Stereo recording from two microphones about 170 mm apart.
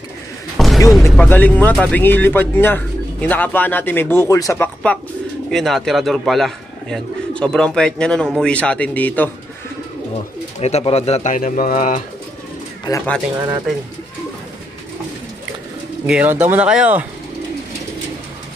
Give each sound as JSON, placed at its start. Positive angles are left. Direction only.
{"t": 0.6, "sound": "a sound", "side_deg": 0}
{"t": 1.1, "sound": "a man's voice", "side_deg": 10}
{"t": 10.6, "sound": "speech", "side_deg": 35}
{"t": 12.9, "sound": "speech", "side_deg": 25}
{"t": 16.1, "sound": "speech", "side_deg": -10}